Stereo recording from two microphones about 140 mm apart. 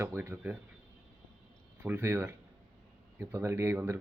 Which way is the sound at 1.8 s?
20° right (ahead or behind).